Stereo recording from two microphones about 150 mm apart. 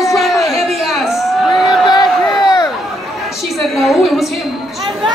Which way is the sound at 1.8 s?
25° left (ahead or behind).